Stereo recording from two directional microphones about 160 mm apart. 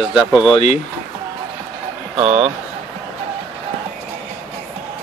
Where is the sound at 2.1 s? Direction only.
40° right (ahead or behind).